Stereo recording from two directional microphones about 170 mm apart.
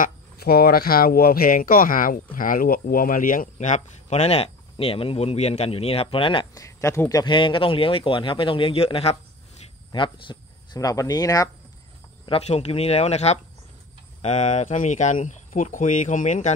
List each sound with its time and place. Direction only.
0.0 s speech: 65° left (ahead or behind); by 6.6 s 30° left (ahead or behind)
6.6 s speech: 15° left (ahead or behind)
12.3 s speech: 35° left (ahead or behind)